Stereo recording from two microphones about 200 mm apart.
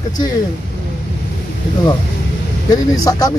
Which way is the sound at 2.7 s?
20° left (ahead or behind).